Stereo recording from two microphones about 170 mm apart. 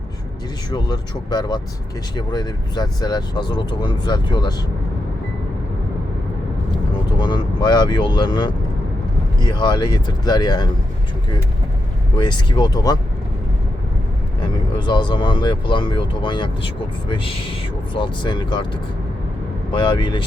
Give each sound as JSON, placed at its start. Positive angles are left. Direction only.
{"t": 0.7, "sound": "speech", "side_deg": 25}
{"t": 7.2, "sound": "speech", "side_deg": 25}
{"t": 12.1, "sound": "speech", "side_deg": 25}
{"t": 14.4, "sound": "speech", "side_deg": 25}